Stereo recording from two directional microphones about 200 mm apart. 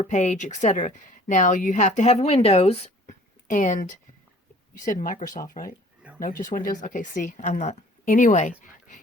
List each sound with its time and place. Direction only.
0.0 s speech: 35° left (ahead or behind)